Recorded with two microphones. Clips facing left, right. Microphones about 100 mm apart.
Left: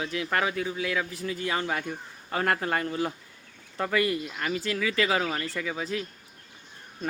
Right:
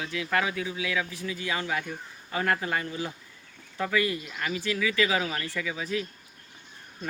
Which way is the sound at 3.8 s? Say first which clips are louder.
Left 1 dB; 45° left (ahead or behind).